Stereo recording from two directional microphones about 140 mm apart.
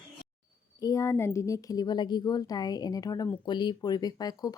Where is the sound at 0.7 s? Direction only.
25° left (ahead or behind).